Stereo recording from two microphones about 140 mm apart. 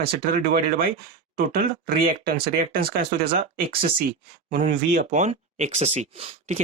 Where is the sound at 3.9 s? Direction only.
90° right.